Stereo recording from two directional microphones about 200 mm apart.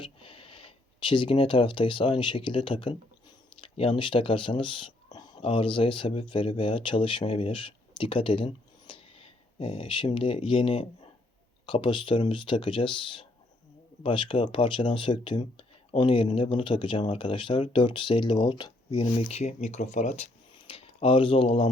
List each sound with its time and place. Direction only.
0.0 s speech: 25° left (ahead or behind)